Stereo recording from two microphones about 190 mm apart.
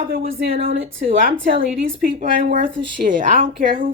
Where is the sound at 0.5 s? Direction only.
30° right (ahead or behind).